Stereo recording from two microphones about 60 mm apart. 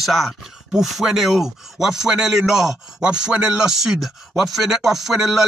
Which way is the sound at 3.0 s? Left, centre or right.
Centre.